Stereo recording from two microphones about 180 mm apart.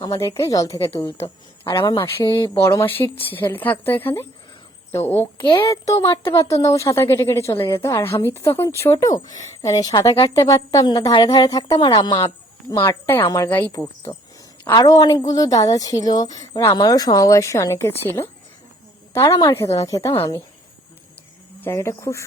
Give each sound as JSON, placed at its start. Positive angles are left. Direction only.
{"t": 0.0, "sound": "a woman's voice", "side_deg": 20}
{"t": 21.6, "sound": "speech", "side_deg": 15}